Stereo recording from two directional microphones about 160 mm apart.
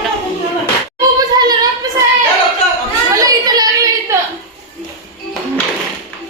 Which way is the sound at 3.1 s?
20° right (ahead or behind).